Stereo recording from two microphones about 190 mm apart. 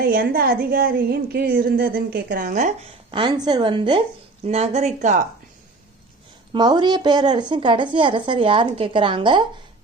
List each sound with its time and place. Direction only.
0.0 s a woman's voice: 50° right (ahead or behind)
3.1 s speech: 25° right (ahead or behind)
4.4 s speech: 35° right (ahead or behind)
6.5 s speech: 20° right (ahead or behind)